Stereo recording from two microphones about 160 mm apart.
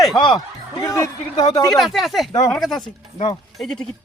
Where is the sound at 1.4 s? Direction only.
35° left (ahead or behind).